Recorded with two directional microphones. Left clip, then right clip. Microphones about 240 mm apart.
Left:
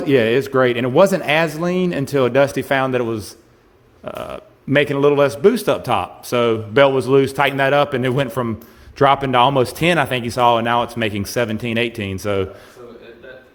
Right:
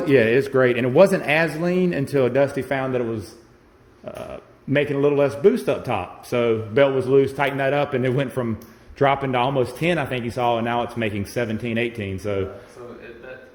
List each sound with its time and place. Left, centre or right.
0.0 s a man's voice: left